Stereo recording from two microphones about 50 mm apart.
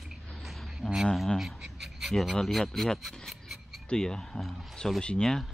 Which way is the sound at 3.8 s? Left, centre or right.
Centre.